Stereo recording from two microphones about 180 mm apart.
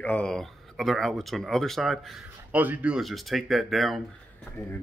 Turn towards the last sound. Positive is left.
turn(degrees=0)  # may be behind; listen again after turning